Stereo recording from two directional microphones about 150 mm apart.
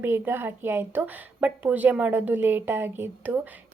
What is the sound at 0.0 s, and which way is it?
A woman's voice, 15° right (ahead or behind).